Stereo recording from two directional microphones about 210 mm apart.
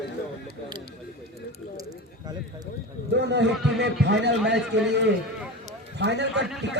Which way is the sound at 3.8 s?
55° right (ahead or behind).